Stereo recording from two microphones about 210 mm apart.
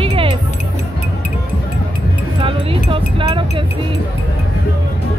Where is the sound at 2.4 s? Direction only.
25° right (ahead or behind).